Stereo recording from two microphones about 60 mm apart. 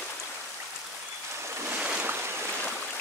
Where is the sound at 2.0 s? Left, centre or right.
Right.